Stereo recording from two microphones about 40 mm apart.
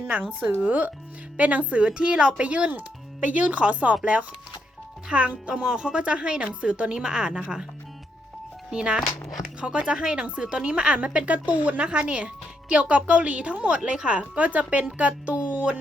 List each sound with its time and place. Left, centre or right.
0.1 s speech: right
1.8 s speech: right
8.7 s speech: right
11.9 s speech: right